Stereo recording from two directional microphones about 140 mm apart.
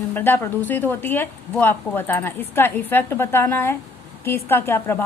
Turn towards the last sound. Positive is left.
turn(degrees=15)  # may be behind; listen again after turning